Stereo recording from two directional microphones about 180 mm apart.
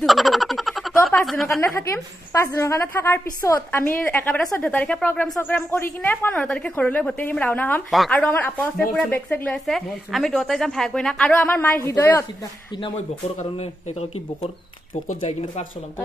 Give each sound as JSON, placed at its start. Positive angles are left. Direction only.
{"t": 0.0, "sound": "a sound", "side_deg": 0}
{"t": 1.8, "sound": "a woman's voice", "side_deg": 15}
{"t": 13.4, "sound": "speech", "side_deg": 40}